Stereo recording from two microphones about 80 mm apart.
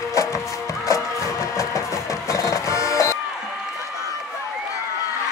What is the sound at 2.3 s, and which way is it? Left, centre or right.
Music, left.